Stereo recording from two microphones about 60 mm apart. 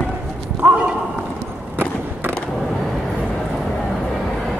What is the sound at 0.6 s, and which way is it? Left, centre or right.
Clip-clop, centre.